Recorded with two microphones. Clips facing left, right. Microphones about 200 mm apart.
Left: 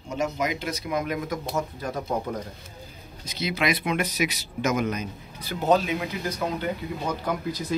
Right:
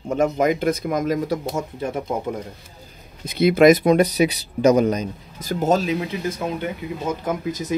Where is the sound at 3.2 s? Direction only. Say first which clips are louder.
Right 13 dB; 55° right (ahead or behind).